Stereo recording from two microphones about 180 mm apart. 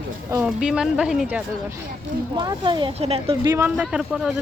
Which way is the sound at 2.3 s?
25° right (ahead or behind).